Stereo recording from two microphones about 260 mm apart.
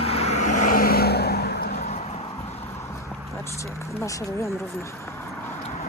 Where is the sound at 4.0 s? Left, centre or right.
Centre.